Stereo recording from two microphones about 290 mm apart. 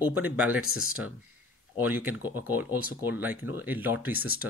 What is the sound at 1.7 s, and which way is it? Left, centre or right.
Speech, centre.